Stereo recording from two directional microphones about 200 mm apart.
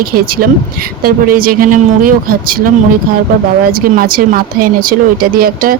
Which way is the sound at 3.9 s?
45° right (ahead or behind).